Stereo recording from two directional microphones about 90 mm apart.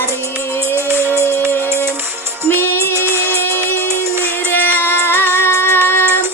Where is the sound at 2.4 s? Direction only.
25° left (ahead or behind).